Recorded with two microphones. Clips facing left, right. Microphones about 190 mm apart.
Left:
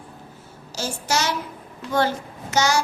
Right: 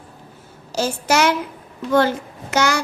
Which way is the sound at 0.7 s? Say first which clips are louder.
Right 6 dB; 60° right (ahead or behind).